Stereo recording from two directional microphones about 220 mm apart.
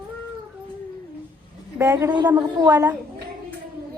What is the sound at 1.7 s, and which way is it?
A woman's voice, 15° right (ahead or behind).